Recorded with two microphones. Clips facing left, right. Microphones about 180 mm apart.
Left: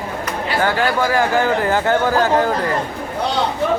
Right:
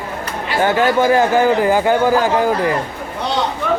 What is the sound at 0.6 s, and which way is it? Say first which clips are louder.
Speech: right 5 dB; 20° right (ahead or behind).